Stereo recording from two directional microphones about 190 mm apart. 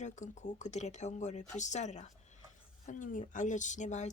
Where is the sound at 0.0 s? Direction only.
40° left (ahead or behind).